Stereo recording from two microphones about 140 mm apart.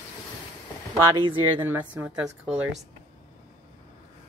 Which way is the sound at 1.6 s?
15° right (ahead or behind).